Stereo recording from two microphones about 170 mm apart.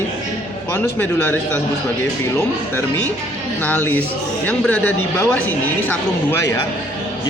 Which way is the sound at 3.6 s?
10° left (ahead or behind).